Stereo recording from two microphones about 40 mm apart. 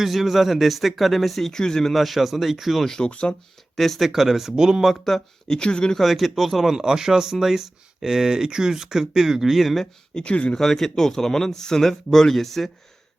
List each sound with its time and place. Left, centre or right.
0.0 s speech: centre
1.5 s speech: centre
1.9 s speech: centre
3.1 s speech: left
3.8 s speech: centre
4.8 s speech: centre
6.0 s speech: centre
9.8 s speech: left
10.5 s speech: centre